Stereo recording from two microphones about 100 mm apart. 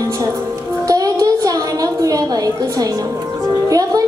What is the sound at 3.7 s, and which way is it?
Speech, 40° right (ahead or behind).